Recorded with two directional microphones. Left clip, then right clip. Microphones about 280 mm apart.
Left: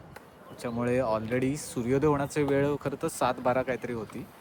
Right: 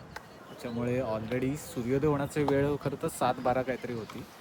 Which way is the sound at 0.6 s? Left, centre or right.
Centre.